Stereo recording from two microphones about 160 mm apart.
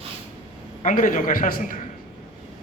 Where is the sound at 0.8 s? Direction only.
55° left (ahead or behind).